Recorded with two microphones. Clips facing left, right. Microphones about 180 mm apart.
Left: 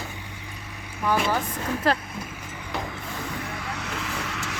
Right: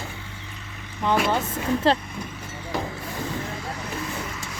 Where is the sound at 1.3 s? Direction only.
25° right (ahead or behind).